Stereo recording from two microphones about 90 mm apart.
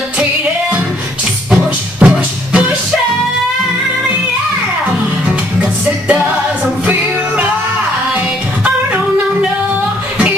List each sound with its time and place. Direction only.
2.0 s music: 15° right (ahead or behind)